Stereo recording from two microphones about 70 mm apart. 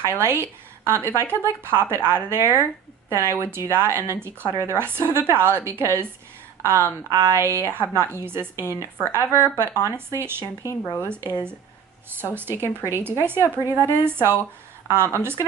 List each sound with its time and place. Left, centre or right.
0.0 s a woman's voice: right
10.6 s speech: left
11.1 s a woman's voice: right